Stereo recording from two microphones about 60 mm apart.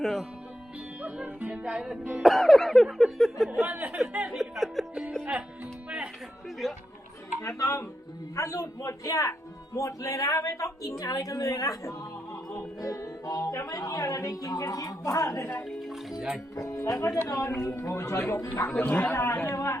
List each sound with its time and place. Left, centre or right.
0.0 s speech: centre
1.0 s speech: right
2.2 s speech: centre
3.7 s speech: right
4.4 s music: centre
6.6 s speech: centre
7.4 s a woman's voice: left
15.8 s speech: centre
16.6 s speech: left
18.8 s a man's voice: left
19.1 s a man's voice: left
19.5 s speech: left